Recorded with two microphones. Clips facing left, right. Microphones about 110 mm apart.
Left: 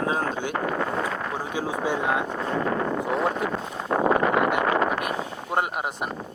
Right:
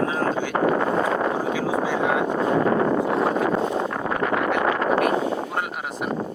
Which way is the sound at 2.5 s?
40° right (ahead or behind).